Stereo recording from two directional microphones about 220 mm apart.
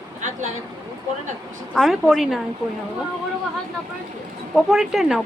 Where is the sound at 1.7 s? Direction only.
Centre (ahead or behind).